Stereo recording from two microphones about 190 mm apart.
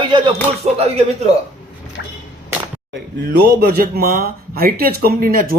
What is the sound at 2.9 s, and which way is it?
Speech, 60° right (ahead or behind).